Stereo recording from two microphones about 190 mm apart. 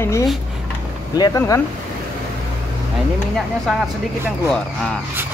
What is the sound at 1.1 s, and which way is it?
Speech, 20° left (ahead or behind).